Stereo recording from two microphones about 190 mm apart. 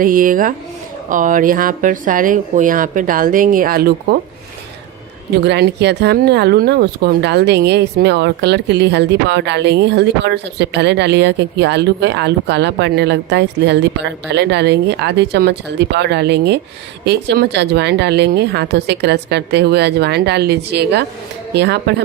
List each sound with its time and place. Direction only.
0.0 s speech: 45° right (ahead or behind)
5.4 s speech: 60° right (ahead or behind)